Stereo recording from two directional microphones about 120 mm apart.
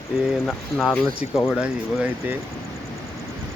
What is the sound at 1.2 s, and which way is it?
Speech, 90° left.